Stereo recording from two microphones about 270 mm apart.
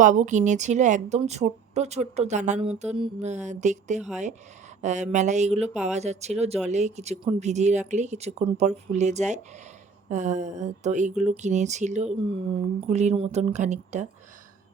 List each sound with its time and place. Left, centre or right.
0.0 s speech: right